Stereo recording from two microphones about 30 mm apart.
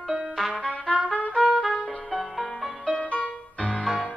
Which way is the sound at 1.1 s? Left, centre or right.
Left.